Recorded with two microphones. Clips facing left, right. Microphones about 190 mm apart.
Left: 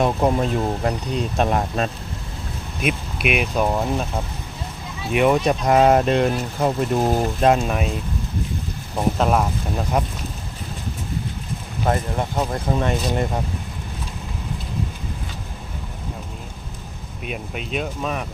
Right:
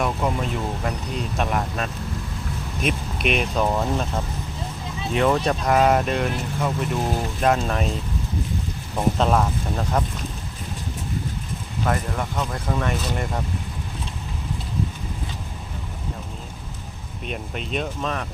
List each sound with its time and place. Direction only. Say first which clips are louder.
0.0 s speech: left 5 dB; 35° left (ahead or behind)
2.8 s speech: left 1 dB; 5° left (ahead or behind)
5.1 s speech: left 3 dB; 15° left (ahead or behind); by 7.3 s 40° left (ahead or behind)
7.6 s speech: left 1 dB; 10° left (ahead or behind)
9.0 s speech: left 1 dB; 10° left (ahead or behind)
11.9 s speech: left 3 dB; 30° left (ahead or behind)
17.2 s speech: left 1 dB; 5° left (ahead or behind)